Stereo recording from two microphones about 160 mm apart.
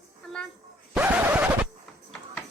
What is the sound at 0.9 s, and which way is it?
Scratch, 10° right (ahead or behind).